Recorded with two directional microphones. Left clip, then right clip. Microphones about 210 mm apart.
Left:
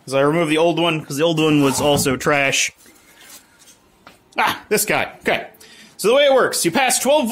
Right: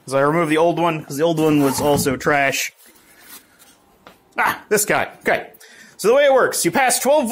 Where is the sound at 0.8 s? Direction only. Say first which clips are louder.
Even; 15° left (ahead or behind).